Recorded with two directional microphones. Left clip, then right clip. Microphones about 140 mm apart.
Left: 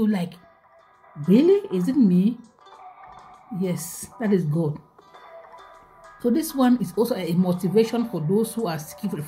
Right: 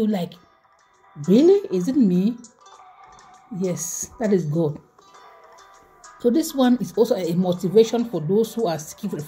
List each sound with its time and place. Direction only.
1.2 s a woman's voice: 10° right (ahead or behind)
2.7 s music: 25° left (ahead or behind)
3.5 s a woman's voice: 5° right (ahead or behind)
4.6 s music: 25° left (ahead or behind)
6.2 s speech: 5° right (ahead or behind)